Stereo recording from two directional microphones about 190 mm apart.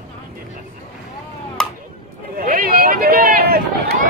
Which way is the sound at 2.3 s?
50° right (ahead or behind).